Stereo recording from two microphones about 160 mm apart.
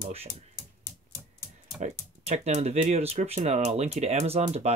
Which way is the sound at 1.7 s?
45° right (ahead or behind).